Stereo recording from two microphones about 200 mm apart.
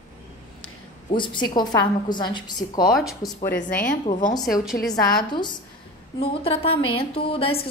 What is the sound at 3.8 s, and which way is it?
Speech, 40° left (ahead or behind).